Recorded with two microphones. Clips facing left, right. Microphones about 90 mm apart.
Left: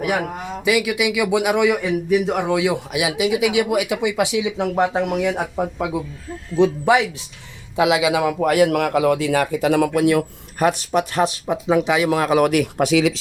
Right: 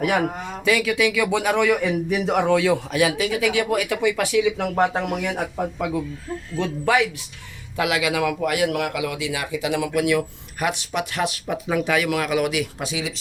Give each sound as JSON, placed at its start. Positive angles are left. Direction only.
{"t": 0.6, "sound": "speech", "side_deg": 10}
{"t": 2.0, "sound": "speech", "side_deg": 0}
{"t": 8.4, "sound": "speech", "side_deg": 35}
{"t": 11.4, "sound": "speech", "side_deg": 25}
{"t": 12.5, "sound": "speech", "side_deg": 60}